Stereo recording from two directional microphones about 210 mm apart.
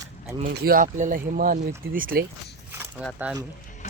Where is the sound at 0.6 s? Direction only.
40° right (ahead or behind).